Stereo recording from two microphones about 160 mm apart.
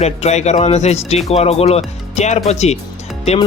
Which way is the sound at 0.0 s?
45° left (ahead or behind).